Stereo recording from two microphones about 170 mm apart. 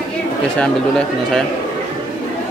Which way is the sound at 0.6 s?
5° left (ahead or behind).